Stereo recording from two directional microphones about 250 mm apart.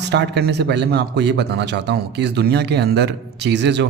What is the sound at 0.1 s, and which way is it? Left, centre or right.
Speech, right.